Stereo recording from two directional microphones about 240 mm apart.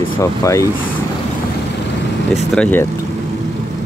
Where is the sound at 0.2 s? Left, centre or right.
Centre.